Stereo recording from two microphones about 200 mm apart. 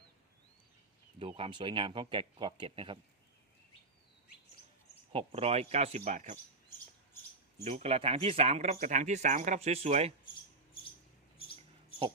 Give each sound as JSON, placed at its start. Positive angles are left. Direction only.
{"t": 1.2, "sound": "speech", "side_deg": -25}
{"t": 5.1, "sound": "speech", "side_deg": -30}
{"t": 7.6, "sound": "speech", "side_deg": -35}
{"t": 11.3, "sound": "a sound", "side_deg": 25}